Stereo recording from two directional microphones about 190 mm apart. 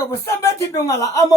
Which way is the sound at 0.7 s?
15° left (ahead or behind).